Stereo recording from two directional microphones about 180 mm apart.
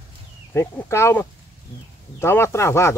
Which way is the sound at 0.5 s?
15° left (ahead or behind).